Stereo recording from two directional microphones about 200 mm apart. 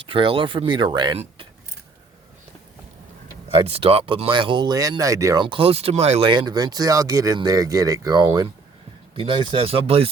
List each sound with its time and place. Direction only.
0.1 s speech: 25° right (ahead or behind)
3.5 s speech: 30° right (ahead or behind)